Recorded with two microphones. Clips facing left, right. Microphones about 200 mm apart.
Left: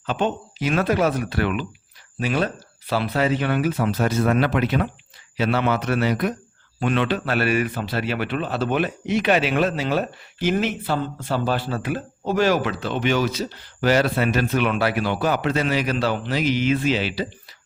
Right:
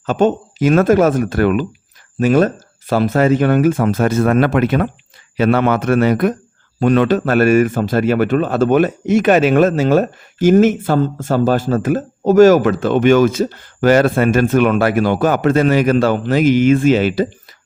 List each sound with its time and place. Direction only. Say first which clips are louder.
0.0 s a man's voice: right 9 dB; 45° right (ahead or behind)